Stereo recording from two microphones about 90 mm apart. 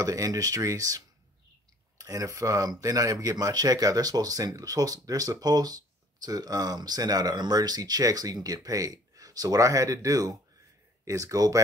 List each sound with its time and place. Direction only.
0.0 s speech: 40° right (ahead or behind)